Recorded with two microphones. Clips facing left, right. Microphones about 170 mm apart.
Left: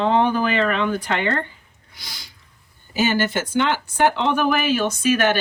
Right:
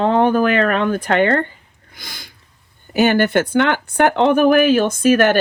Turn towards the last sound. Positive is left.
turn(degrees=-50)  # may be behind; listen again after turning